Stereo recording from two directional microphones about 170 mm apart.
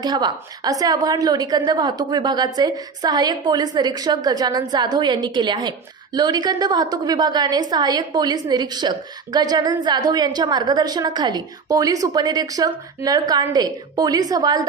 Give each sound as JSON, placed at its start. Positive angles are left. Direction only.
{"t": 0.0, "sound": "a woman's voice", "side_deg": -25}